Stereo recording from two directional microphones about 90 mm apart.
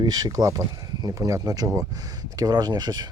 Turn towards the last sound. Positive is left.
turn(degrees=-45)  # may be behind; listen again after turning